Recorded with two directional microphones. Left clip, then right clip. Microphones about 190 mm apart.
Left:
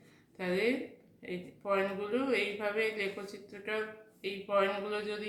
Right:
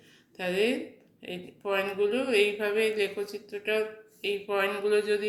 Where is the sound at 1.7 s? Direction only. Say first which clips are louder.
Right 6 dB; 20° right (ahead or behind).